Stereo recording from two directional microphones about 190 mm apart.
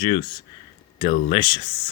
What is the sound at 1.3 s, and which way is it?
Speech, 25° left (ahead or behind).